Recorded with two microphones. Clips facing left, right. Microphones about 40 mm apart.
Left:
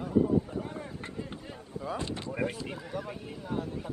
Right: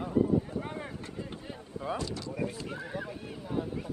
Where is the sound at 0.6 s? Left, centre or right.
Right.